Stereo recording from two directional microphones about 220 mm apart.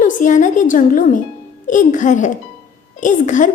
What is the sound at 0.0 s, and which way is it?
A woman's voice, 35° left (ahead or behind).